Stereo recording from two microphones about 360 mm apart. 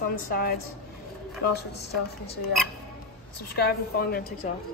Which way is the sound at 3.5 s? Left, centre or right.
Left.